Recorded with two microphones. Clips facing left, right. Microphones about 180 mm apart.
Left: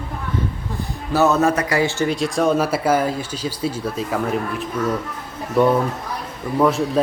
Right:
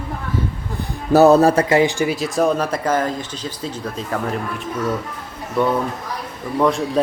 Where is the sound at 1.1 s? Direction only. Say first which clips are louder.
Right 6 dB; 35° right (ahead or behind); by 2.1 s 15° right (ahead or behind).